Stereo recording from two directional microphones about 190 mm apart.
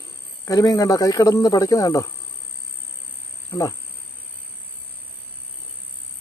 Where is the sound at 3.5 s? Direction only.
15° left (ahead or behind).